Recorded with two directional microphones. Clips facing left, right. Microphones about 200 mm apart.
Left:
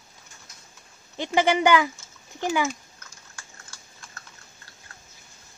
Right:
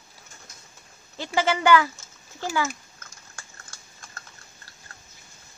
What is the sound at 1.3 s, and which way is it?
Speech, 15° left (ahead or behind).